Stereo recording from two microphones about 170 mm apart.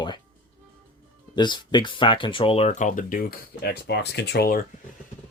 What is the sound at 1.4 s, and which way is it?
Speech, 25° left (ahead or behind).